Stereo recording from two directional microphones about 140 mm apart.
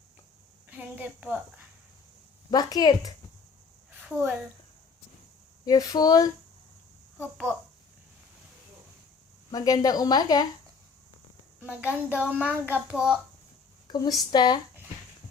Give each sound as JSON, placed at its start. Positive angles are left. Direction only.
{"t": 0.7, "sound": "a woman's voice", "side_deg": -10}
{"t": 2.5, "sound": "speech", "side_deg": 30}
{"t": 4.0, "sound": "a woman's voice", "side_deg": -10}
{"t": 5.6, "sound": "speech", "side_deg": 25}
{"t": 9.5, "sound": "speech", "side_deg": 25}
{"t": 11.6, "sound": "a child's voice", "side_deg": -10}
{"t": 13.8, "sound": "speech", "side_deg": 30}